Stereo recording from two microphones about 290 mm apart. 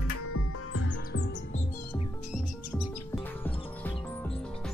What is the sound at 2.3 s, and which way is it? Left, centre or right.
Music, centre.